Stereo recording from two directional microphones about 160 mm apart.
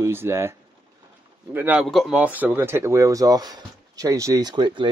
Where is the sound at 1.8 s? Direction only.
Centre (ahead or behind).